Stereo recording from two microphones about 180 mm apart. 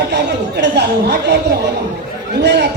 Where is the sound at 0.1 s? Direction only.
70° right (ahead or behind).